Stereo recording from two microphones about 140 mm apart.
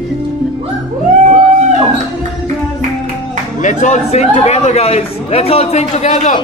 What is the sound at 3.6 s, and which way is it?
A man's voice, 60° left (ahead or behind).